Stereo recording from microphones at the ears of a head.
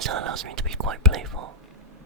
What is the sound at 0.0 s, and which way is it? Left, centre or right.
Whispering, right.